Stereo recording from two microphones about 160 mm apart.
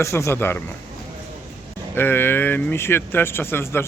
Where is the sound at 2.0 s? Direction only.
15° left (ahead or behind).